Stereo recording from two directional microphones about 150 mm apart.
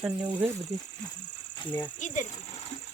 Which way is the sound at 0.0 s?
10° right (ahead or behind).